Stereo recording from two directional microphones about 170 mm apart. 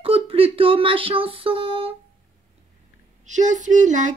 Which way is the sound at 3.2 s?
45° right (ahead or behind).